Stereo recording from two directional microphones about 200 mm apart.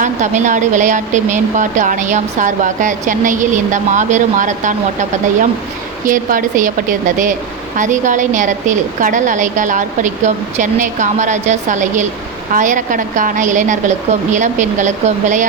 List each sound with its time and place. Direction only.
0.0 s speech: 40° right (ahead or behind)